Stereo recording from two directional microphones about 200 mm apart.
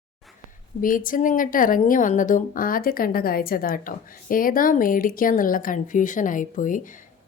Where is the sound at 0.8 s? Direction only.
45° left (ahead or behind).